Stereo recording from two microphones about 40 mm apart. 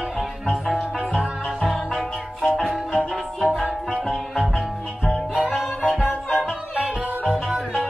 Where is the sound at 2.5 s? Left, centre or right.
Centre.